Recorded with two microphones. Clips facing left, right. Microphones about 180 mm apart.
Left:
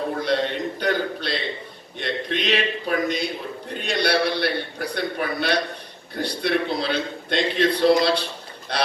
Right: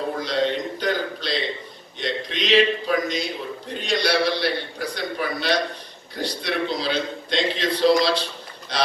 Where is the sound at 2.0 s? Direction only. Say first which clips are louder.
Left 1 dB; 55° left (ahead or behind).